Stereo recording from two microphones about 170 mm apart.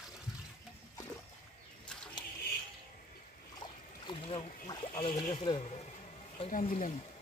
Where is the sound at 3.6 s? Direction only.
30° left (ahead or behind).